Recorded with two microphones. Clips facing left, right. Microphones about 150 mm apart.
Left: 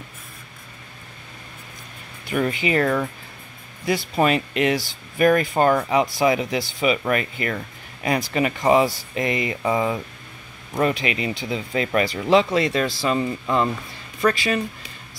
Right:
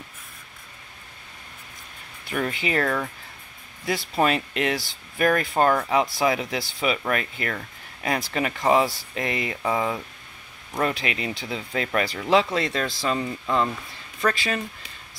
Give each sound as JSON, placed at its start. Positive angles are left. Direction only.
{"t": 2.2, "sound": "speech", "side_deg": 5}
{"t": 2.8, "sound": "speech", "side_deg": 15}
{"t": 3.8, "sound": "speech", "side_deg": 0}